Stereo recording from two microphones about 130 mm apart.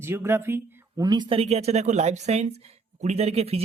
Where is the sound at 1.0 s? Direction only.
35° right (ahead or behind).